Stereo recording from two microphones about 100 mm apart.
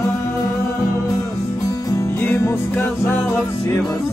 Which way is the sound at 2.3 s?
30° left (ahead or behind).